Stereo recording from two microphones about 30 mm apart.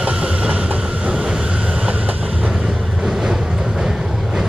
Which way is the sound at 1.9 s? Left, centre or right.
Right.